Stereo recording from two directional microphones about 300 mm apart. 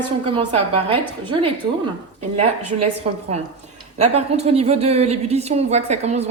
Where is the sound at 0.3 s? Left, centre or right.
Centre.